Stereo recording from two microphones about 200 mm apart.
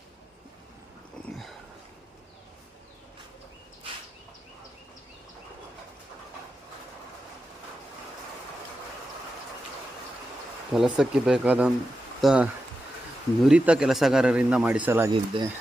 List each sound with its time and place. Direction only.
1.3 s a sound: centre (ahead or behind)
10.7 s speech: 5° right (ahead or behind)
15.1 s speech: 25° right (ahead or behind)